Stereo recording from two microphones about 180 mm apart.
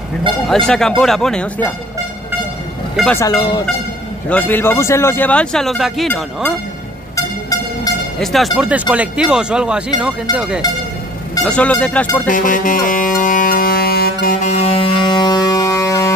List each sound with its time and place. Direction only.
0.5 s speech: centre (ahead or behind)
3.2 s speech: 20° left (ahead or behind)
4.3 s speech: 10° left (ahead or behind)
7.2 s a sound: 20° left (ahead or behind)
8.2 s speech: centre (ahead or behind)
11.4 s speech: 5° left (ahead or behind)
12.3 s music: 45° left (ahead or behind)
14.4 s music: 35° left (ahead or behind); by 16.2 s 15° left (ahead or behind)